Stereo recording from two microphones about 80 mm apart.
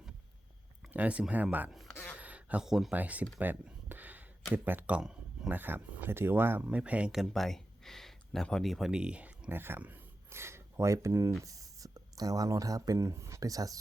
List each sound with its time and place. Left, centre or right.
0.9 s speech: centre
2.1 s a sound: centre
2.6 s speech: centre
2.9 s speech: centre
3.3 s a sound: right
4.5 s speech: right
4.9 s a sound: centre
5.5 s speech: right
6.7 s speech: centre
7.1 s speech: centre
8.9 s speech: centre
9.5 s speech: right